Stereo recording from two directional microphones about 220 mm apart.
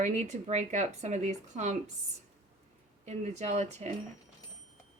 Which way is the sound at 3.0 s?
30° right (ahead or behind).